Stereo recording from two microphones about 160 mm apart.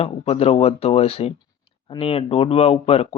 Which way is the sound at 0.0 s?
40° left (ahead or behind).